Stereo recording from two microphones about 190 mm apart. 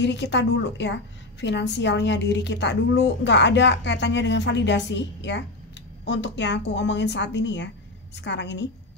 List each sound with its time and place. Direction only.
0.0 s a woman's voice: 65° left (ahead or behind)